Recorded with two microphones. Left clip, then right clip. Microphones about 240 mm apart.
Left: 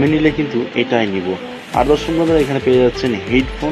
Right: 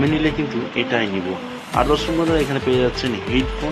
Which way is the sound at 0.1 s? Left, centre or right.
Centre.